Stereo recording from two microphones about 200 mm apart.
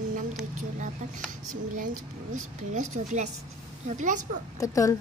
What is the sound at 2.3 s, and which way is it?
Speech, 40° right (ahead or behind).